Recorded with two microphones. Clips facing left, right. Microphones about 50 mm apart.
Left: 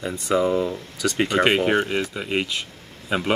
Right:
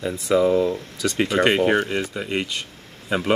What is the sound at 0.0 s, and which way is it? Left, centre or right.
Speech, centre.